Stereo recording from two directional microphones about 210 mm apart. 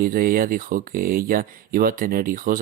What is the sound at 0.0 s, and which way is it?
Speech, 45° right (ahead or behind).